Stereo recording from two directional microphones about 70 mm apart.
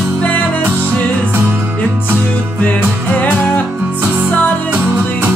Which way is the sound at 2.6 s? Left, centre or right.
Left.